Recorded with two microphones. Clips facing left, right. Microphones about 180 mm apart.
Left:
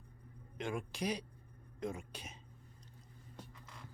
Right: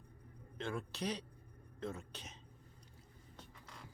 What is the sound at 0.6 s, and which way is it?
A man's voice, 15° left (ahead or behind).